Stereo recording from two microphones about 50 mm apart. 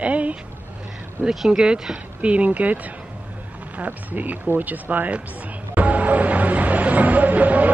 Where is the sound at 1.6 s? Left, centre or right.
Centre; by 5.2 s right.